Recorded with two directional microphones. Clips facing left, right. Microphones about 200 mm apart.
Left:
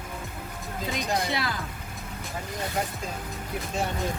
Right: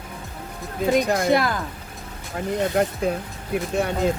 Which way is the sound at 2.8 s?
60° right (ahead or behind).